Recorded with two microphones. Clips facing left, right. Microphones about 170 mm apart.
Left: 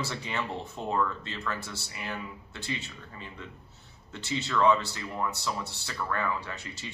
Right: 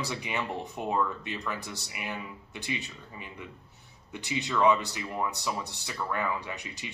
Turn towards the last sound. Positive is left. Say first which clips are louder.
# right 1 dB
turn(degrees=-15)  # may be behind; listen again after turning